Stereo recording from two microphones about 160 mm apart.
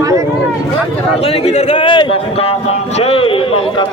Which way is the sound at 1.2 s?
40° left (ahead or behind).